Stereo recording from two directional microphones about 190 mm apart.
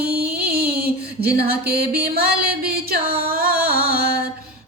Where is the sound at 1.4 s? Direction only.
55° right (ahead or behind).